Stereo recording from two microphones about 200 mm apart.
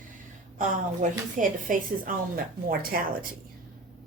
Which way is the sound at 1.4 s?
40° right (ahead or behind).